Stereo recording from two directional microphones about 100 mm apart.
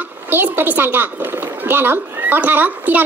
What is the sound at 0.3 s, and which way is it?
A woman's voice, 20° right (ahead or behind).